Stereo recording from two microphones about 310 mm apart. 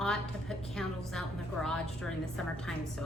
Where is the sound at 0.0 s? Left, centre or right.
Centre.